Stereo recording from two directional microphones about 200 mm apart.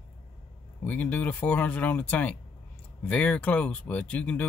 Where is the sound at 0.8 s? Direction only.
10° left (ahead or behind).